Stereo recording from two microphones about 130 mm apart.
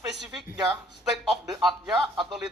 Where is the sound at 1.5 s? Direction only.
35° right (ahead or behind).